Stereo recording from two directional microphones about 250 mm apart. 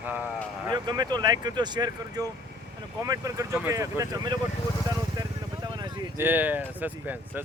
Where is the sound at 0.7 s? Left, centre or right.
Centre.